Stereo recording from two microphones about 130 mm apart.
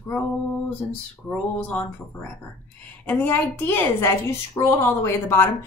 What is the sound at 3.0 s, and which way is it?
A woman's voice, 15° left (ahead or behind).